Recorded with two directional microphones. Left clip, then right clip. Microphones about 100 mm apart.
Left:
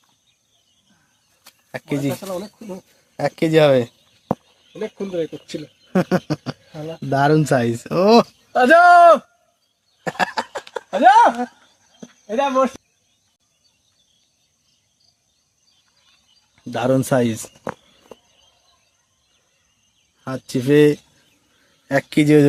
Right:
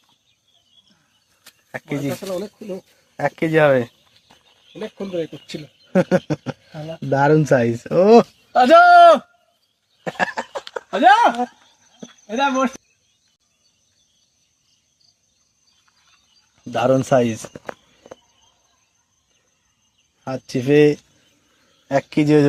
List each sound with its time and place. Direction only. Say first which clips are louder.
1.7 s speech: left 2 dB; 45° left (ahead or behind)
2.2 s speech: right 2 dB; 20° left (ahead or behind)
3.2 s speech: left 1 dB; 40° left (ahead or behind)
5.9 s speech: right 3 dB; 10° left (ahead or behind)
8.5 s speech: right 1 dB; 35° left (ahead or behind)
10.0 s a sound: left 1 dB; 25° left (ahead or behind)
10.9 s speech: left 1 dB; centre (ahead or behind)
12.0 s speech: even; 15° left (ahead or behind)
16.7 s speech: right 2 dB; 35° left (ahead or behind)
20.2 s speech: even; 30° left (ahead or behind)